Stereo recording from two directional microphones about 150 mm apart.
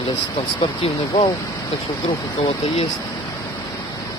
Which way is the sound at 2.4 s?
40° left (ahead or behind).